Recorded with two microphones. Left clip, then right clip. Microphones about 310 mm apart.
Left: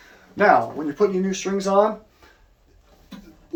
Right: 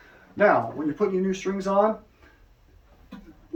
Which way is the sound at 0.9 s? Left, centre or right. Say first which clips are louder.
Left 5 dB; centre.